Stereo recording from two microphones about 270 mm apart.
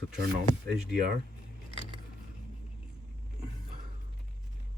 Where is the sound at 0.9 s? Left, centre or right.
Right.